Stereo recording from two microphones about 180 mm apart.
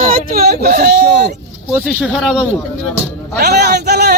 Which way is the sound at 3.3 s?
60° right (ahead or behind).